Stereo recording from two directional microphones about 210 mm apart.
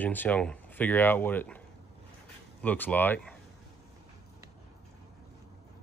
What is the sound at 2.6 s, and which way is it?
Speech, 10° left (ahead or behind).